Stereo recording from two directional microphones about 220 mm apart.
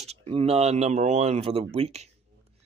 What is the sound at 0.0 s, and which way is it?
Speech, 30° right (ahead or behind).